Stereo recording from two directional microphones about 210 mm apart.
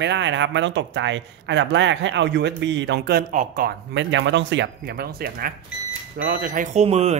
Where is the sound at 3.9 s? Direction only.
60° right (ahead or behind).